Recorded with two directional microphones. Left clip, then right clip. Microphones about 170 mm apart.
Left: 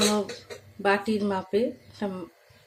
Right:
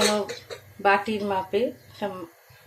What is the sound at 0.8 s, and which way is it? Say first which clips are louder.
Speech: right 3 dB; 15° left (ahead or behind).